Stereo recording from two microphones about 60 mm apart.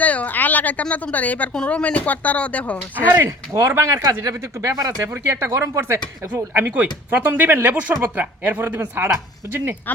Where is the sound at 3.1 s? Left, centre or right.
Right.